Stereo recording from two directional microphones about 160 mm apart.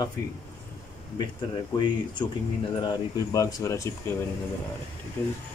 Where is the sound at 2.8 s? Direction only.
25° left (ahead or behind).